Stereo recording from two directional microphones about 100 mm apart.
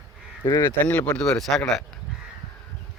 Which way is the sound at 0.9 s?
10° left (ahead or behind).